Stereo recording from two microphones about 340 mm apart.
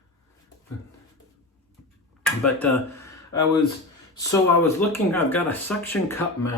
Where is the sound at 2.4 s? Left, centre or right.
Centre.